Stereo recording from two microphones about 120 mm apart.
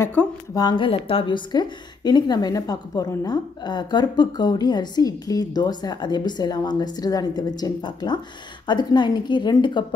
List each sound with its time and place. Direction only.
0.0 s speech: 15° left (ahead or behind)
0.6 s a woman's voice: 40° left (ahead or behind)